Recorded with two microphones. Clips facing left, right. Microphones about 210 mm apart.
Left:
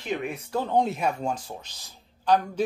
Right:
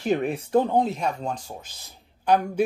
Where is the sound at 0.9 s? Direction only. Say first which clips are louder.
Left 1 dB; 10° left (ahead or behind).